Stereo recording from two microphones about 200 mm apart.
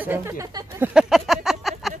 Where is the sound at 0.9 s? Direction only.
Centre (ahead or behind).